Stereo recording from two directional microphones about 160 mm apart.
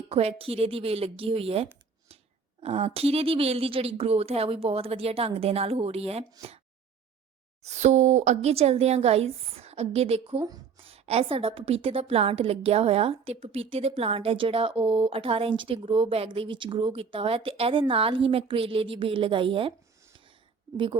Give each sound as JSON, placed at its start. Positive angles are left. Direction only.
{"t": 0.1, "sound": "a woman's voice", "side_deg": -40}
{"t": 7.6, "sound": "a woman's voice", "side_deg": -45}